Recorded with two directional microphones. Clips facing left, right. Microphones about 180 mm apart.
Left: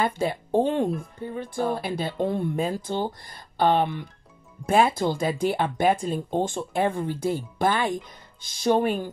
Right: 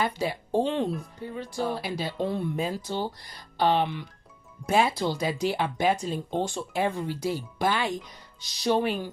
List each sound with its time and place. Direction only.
0.0 s speech: 50° left (ahead or behind)